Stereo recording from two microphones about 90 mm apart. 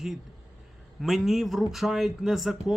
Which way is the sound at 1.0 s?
Centre (ahead or behind).